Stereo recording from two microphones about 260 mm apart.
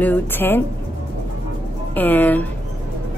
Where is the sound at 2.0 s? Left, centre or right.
Centre.